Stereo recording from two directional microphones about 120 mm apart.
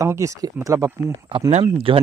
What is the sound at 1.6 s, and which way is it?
Speech, 50° right (ahead or behind).